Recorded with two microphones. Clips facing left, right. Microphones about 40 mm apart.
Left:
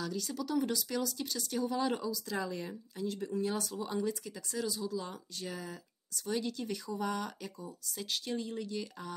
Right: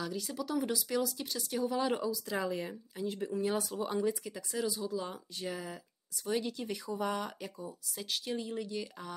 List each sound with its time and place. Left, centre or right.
0.0 s speech: centre